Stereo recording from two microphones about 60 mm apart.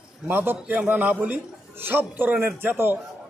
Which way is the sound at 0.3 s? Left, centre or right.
Right.